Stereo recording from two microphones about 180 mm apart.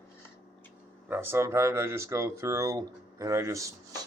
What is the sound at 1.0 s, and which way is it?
Speech, 10° right (ahead or behind).